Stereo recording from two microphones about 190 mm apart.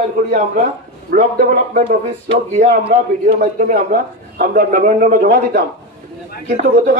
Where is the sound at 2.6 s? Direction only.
60° right (ahead or behind).